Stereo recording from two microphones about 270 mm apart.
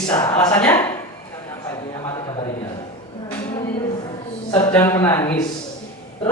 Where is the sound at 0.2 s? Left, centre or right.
Centre.